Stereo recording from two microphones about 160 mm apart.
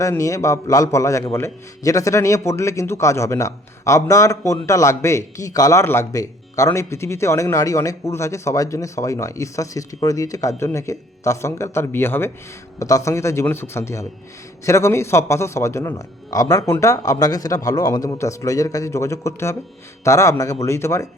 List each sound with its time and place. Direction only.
0.0 s a man's voice: 20° left (ahead or behind)